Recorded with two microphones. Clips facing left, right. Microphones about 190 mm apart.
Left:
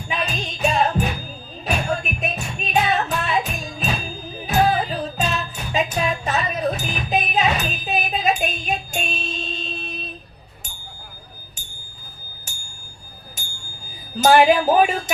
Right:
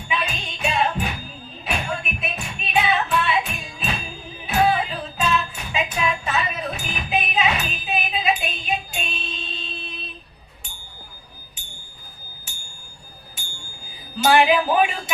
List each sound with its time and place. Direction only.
0.1 s music: 40° left (ahead or behind)
14.2 s music: 45° left (ahead or behind)